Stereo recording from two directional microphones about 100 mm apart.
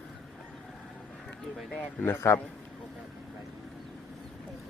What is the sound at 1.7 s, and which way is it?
Speech, 15° left (ahead or behind).